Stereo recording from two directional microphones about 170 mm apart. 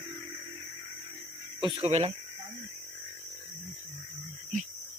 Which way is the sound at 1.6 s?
30° right (ahead or behind).